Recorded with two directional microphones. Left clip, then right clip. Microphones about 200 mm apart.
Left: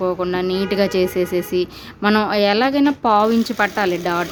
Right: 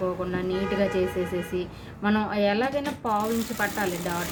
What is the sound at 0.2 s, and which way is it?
Speech, 55° left (ahead or behind).